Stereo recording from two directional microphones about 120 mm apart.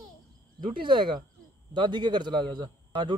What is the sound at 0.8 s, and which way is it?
A man's voice, 40° right (ahead or behind).